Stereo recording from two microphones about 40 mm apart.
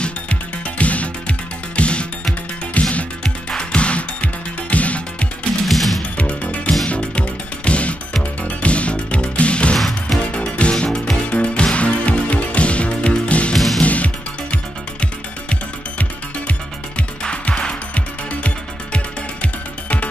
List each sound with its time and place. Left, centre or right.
0.0 s music: left
5.7 s music: centre
6.1 s music: left
17.2 s music: left
17.9 s music: left